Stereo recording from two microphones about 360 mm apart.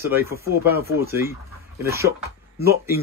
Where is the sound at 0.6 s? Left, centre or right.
Right.